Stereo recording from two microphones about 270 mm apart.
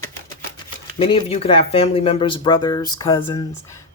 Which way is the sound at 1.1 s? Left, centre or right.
Left.